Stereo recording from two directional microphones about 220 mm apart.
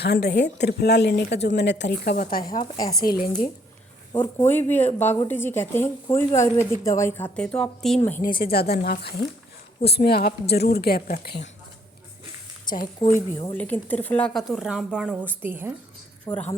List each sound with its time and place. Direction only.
0.0 s speech: 50° left (ahead or behind)
2.7 s a woman's voice: 15° left (ahead or behind)
3.0 s speech: 40° left (ahead or behind)
4.5 s a woman's voice: 10° left (ahead or behind)
8.2 s speech: 45° left (ahead or behind)
13.1 s speech: 15° left (ahead or behind); by 15.7 s 10° right (ahead or behind)
16.3 s a woman's voice: 10° left (ahead or behind)